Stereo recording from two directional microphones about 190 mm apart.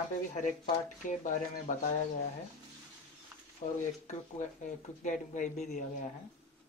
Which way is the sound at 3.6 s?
35° left (ahead or behind).